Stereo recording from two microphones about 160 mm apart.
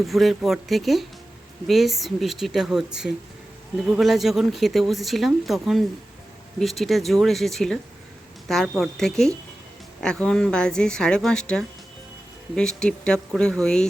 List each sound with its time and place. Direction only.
0.0 s speech: centre (ahead or behind)